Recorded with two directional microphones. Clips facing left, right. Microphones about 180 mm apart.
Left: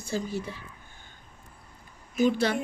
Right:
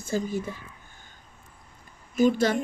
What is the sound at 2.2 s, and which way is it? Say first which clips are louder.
Speech: right 2 dB; 45° right (ahead or behind).